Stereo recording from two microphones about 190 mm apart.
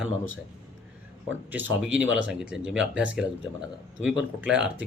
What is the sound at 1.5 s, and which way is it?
Speech, 10° right (ahead or behind).